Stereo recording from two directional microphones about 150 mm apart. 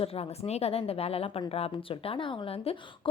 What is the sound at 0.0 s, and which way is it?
A woman's voice, 45° left (ahead or behind).